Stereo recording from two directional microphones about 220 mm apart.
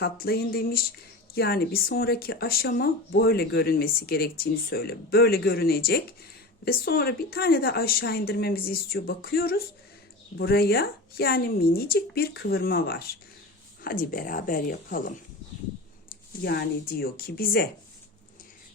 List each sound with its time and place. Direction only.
0.0 s speech: 45° left (ahead or behind)
16.4 s speech: 45° left (ahead or behind)